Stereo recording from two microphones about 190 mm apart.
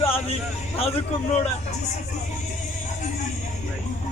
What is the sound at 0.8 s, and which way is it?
Speech, 30° left (ahead or behind).